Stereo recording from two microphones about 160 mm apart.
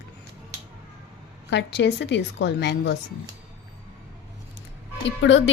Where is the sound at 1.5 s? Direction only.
90° left.